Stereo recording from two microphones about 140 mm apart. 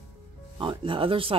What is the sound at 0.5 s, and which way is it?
Speech, 35° right (ahead or behind).